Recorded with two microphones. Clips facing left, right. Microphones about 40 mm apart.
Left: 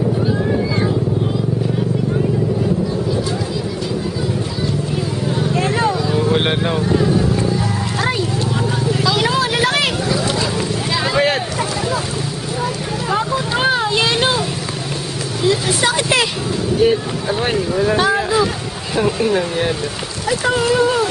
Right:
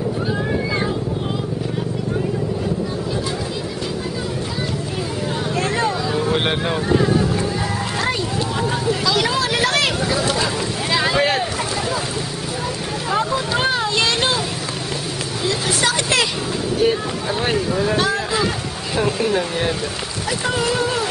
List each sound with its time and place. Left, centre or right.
0.2 s boat: centre
5.5 s vehicle: centre
9.0 s vehicle: centre
10.9 s boat: centre
11.1 s vehicle: centre
13.1 s vehicle: centre
15.4 s vehicle: centre
16.7 s boat: centre
17.9 s a sound: centre
20.7 s a sound: left